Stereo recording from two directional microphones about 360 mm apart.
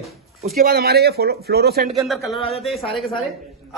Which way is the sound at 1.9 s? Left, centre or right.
Centre.